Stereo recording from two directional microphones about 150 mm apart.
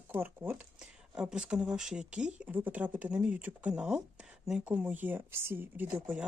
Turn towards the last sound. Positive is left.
turn(degrees=-10)  # may be behind; listen again after turning